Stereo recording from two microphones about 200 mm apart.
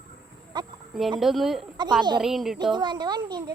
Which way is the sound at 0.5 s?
20° right (ahead or behind).